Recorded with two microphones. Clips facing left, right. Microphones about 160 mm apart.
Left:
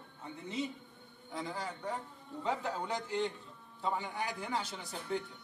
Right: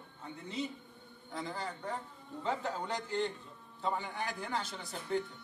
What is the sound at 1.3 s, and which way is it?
A man's voice, centre (ahead or behind).